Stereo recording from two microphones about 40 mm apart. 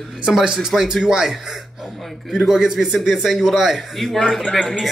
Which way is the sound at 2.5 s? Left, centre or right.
Centre.